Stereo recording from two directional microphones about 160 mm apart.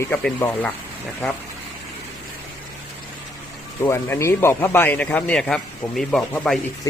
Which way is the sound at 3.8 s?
15° left (ahead or behind).